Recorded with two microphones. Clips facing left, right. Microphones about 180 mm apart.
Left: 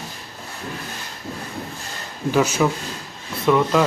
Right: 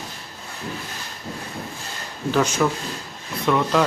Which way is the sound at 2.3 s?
10° left (ahead or behind).